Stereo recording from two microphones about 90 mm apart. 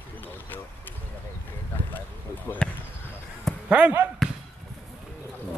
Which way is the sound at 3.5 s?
5° left (ahead or behind).